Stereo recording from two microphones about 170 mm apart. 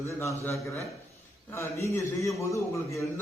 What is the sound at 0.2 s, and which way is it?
A man's voice, 15° left (ahead or behind).